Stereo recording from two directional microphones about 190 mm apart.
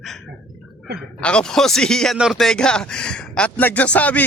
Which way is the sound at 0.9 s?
5° left (ahead or behind).